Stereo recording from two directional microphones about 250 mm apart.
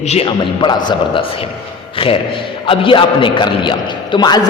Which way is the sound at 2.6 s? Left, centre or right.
Left.